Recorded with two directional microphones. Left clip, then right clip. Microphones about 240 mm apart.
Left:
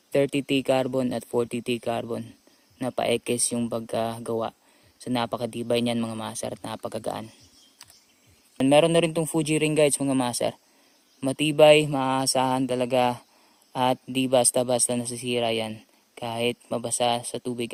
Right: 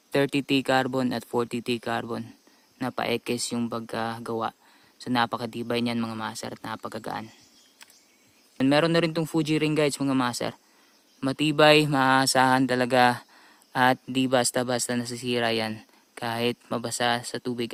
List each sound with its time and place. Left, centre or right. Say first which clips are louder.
0.1 s speech: left 1 dB; right
8.8 s speech: left 3 dB; centre